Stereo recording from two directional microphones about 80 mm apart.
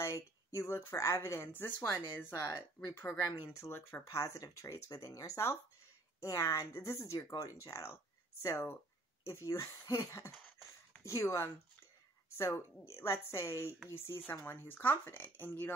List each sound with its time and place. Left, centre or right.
0.0 s speech: left
1.5 s speech: left
9.8 s a sound: left
11.1 s speech: left